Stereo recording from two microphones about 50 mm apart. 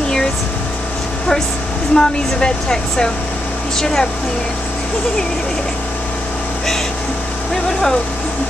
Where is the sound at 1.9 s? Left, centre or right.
Centre.